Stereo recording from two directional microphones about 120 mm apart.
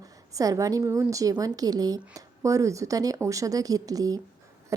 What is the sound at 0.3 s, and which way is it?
A woman's voice, 30° right (ahead or behind).